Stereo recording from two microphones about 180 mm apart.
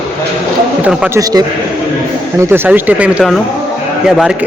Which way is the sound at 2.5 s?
10° right (ahead or behind).